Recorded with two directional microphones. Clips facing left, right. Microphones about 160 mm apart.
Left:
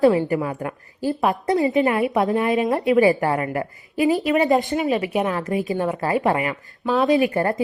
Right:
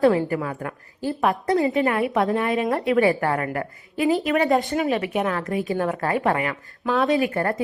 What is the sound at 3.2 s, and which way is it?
Speech, 15° left (ahead or behind).